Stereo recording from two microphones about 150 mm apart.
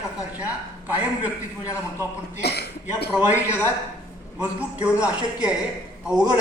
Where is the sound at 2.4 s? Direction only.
90° left.